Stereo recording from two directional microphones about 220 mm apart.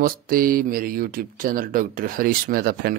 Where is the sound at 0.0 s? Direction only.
40° right (ahead or behind).